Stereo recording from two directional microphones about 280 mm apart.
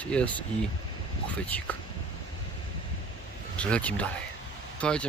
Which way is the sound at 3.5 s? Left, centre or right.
Centre.